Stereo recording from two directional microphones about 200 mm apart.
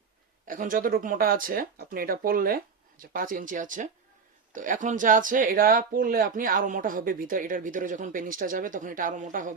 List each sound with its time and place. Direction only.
0.4 s speech: 45° right (ahead or behind)